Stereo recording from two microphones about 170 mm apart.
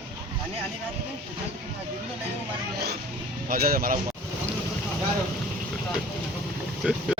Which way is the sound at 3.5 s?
60° right (ahead or behind).